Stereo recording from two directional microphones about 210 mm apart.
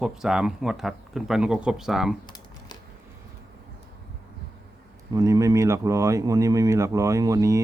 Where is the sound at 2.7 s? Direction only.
20° left (ahead or behind).